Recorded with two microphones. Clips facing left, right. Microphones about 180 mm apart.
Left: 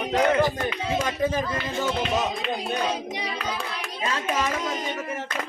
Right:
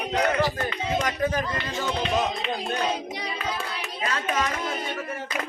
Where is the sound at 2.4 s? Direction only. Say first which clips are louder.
Left 1 dB; 5° left (ahead or behind).